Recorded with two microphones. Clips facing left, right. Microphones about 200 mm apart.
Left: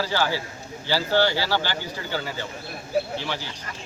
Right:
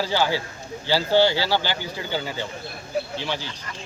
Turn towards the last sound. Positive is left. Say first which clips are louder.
# left 1 dB
turn(degrees=-15)  # may be behind; listen again after turning